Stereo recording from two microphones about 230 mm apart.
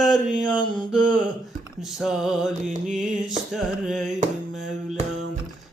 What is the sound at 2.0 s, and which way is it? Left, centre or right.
Mantra, centre.